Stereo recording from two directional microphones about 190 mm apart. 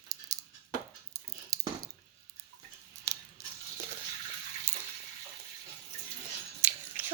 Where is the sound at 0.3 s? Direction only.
15° right (ahead or behind).